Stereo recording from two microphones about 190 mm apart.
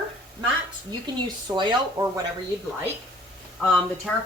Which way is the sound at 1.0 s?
20° right (ahead or behind).